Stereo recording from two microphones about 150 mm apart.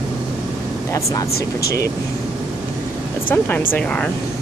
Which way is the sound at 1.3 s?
90° left.